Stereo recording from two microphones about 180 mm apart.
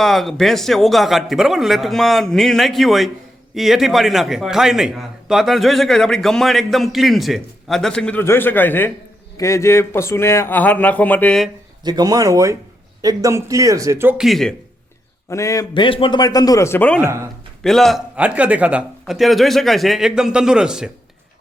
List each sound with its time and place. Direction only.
0.0 s a man's voice: centre (ahead or behind)
11.8 s speech: 20° right (ahead or behind); by 14.5 s centre (ahead or behind)
15.3 s a man's voice: 15° left (ahead or behind); by 20.9 s 5° right (ahead or behind)